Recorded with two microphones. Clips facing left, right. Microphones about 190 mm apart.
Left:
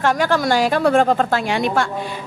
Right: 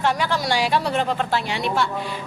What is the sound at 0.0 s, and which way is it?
A woman's voice, 50° left (ahead or behind).